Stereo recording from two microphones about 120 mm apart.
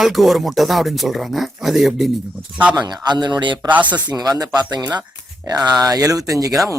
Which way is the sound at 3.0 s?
40° right (ahead or behind).